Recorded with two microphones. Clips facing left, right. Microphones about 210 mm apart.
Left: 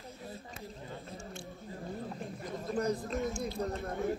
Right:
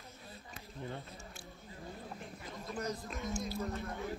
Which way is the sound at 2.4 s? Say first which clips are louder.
Left 8 dB; 45° left (ahead or behind).